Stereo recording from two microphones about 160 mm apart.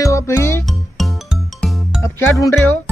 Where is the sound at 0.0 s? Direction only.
20° left (ahead or behind).